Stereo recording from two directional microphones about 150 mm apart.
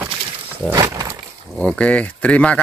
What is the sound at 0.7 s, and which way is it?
Horse, 25° right (ahead or behind).